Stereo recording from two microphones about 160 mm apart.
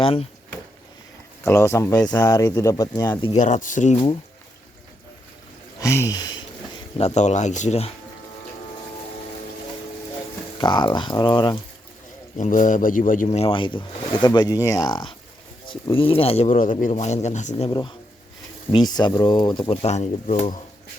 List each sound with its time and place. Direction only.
0.0 s speech: 35° left (ahead or behind)
1.5 s speech: 15° left (ahead or behind)
3.3 s speech: 50° left (ahead or behind)
5.8 s speech: 20° left (ahead or behind)
7.0 s speech: 45° left (ahead or behind)
10.6 s speech: 30° left (ahead or behind)
12.4 s a man's voice: 55° left (ahead or behind)
13.2 s speech: 35° left (ahead or behind)
16.6 s a man's voice: 55° left (ahead or behind)
16.9 s speech: 40° left (ahead or behind)
17.7 s speech: 30° left (ahead or behind); by 20.6 s 50° left (ahead or behind)